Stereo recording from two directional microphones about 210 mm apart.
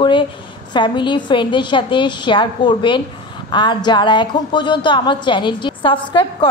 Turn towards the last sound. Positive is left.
turn(degrees=25)  # may be behind; listen again after turning